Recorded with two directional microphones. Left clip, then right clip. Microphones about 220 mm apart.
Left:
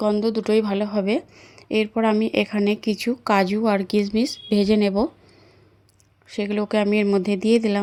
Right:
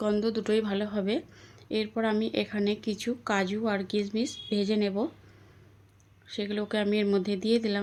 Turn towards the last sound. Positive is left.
turn(degrees=30)  # may be behind; listen again after turning